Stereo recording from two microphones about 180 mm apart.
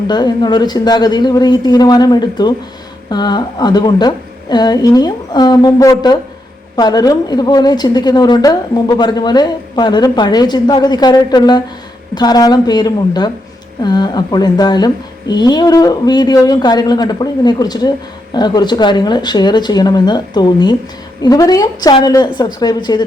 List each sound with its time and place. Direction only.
0.1 s a woman's voice: 25° left (ahead or behind)